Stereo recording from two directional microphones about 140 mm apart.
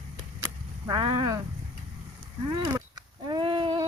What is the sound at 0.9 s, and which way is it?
Speech, 30° right (ahead or behind).